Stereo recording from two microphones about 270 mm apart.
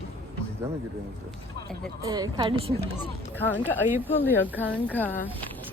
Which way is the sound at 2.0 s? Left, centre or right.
Centre.